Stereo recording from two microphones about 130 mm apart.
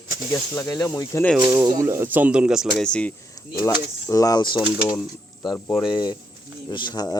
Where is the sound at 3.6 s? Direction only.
25° left (ahead or behind).